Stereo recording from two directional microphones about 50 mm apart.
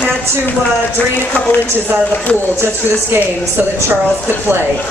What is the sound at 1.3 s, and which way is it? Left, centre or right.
Speech, left.